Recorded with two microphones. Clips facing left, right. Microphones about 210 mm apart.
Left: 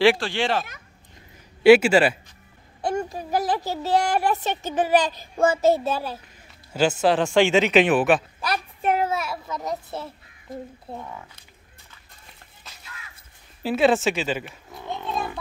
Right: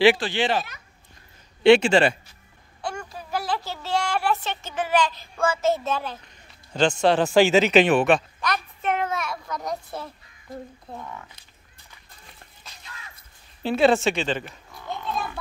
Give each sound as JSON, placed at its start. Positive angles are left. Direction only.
{"t": 0.0, "sound": "speech", "side_deg": 0}
{"t": 3.0, "sound": "a child's voice", "side_deg": 40}
{"t": 3.3, "sound": "a child's voice", "side_deg": 15}
{"t": 3.9, "sound": "a child's voice", "side_deg": 40}
{"t": 4.2, "sound": "a child's voice", "side_deg": 15}
{"t": 4.6, "sound": "a child's voice", "side_deg": 40}
{"t": 5.3, "sound": "child singing", "side_deg": 20}
{"t": 5.7, "sound": "a child's voice", "side_deg": 10}
{"t": 8.8, "sound": "child singing", "side_deg": 30}
{"t": 9.1, "sound": "children playing", "side_deg": 5}
{"t": 10.9, "sound": "speech", "side_deg": 25}
{"t": 13.6, "sound": "speech", "side_deg": 5}